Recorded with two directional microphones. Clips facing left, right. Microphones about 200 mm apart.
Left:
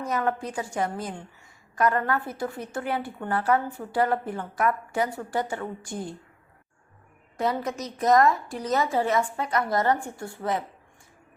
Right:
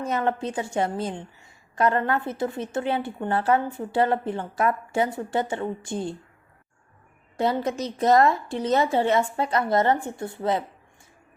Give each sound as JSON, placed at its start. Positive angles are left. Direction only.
{"t": 0.0, "sound": "a woman's voice", "side_deg": -25}
{"t": 7.3, "sound": "a woman's voice", "side_deg": -30}